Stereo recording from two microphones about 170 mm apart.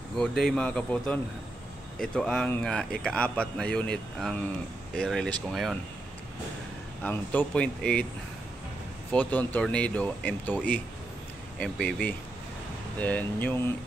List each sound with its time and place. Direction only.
0.2 s speech: 5° left (ahead or behind)
7.0 s speech: 10° left (ahead or behind)
9.1 s speech: 10° left (ahead or behind)